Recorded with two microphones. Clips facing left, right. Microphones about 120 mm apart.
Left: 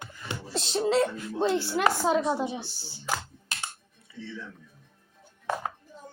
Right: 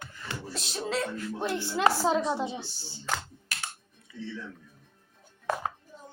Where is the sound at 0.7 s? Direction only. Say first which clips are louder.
Left 8 dB; 30° left (ahead or behind).